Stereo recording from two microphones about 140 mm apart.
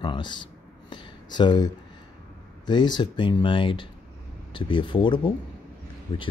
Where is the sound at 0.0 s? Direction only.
35° left (ahead or behind).